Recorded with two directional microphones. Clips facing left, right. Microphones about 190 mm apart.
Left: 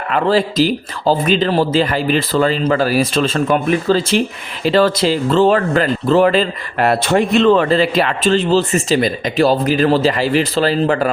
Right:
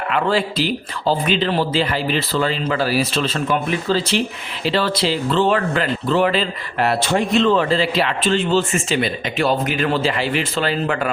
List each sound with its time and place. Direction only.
0.1 s speech: 40° left (ahead or behind)